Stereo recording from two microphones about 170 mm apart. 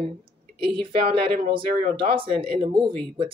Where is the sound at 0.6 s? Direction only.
30° right (ahead or behind).